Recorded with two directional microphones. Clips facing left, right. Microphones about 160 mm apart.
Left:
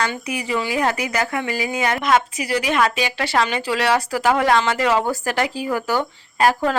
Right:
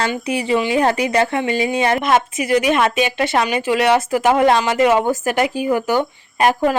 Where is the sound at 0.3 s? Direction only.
30° right (ahead or behind).